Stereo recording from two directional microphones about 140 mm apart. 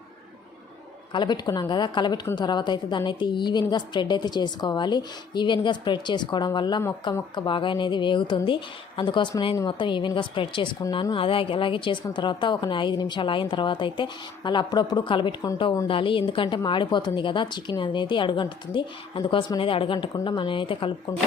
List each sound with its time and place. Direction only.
1.1 s a woman's voice: 30° left (ahead or behind)